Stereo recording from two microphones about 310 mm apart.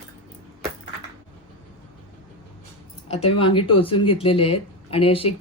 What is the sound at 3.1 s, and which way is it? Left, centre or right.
Speech, centre.